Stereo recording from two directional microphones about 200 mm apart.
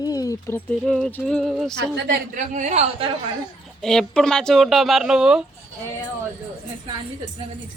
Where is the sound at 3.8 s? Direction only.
5° left (ahead or behind).